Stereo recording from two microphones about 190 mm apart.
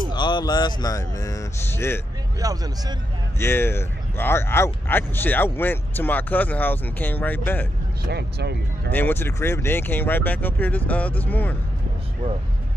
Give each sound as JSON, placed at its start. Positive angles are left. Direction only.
{"t": 0.1, "sound": "speech", "side_deg": 25}
{"t": 2.4, "sound": "speech", "side_deg": -20}
{"t": 3.3, "sound": "speech", "side_deg": 15}
{"t": 8.0, "sound": "speech", "side_deg": -60}
{"t": 8.9, "sound": "speech", "side_deg": 10}